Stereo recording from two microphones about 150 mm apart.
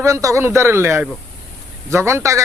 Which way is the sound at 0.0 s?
20° right (ahead or behind).